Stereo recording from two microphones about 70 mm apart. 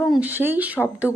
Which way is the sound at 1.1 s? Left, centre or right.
Left.